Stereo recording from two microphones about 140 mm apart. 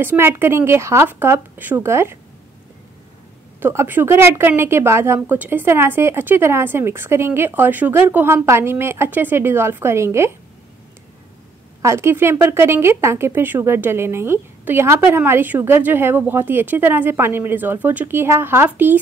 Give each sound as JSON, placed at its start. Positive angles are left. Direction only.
{"t": 0.0, "sound": "speech", "side_deg": -15}
{"t": 3.5, "sound": "speech", "side_deg": -15}
{"t": 11.8, "sound": "speech", "side_deg": -20}